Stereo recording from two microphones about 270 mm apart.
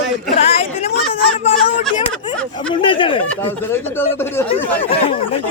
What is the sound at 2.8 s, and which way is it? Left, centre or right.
Speech, centre.